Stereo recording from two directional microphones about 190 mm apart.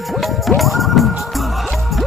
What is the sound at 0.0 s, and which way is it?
Music, centre (ahead or behind).